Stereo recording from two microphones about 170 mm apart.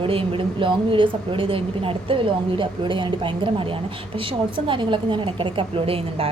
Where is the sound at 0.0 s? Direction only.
30° right (ahead or behind).